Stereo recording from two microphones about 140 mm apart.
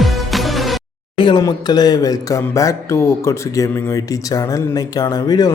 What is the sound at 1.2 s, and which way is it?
Speech, 30° left (ahead or behind).